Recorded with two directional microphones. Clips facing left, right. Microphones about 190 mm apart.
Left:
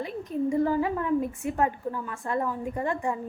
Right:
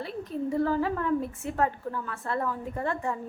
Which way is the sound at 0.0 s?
15° left (ahead or behind).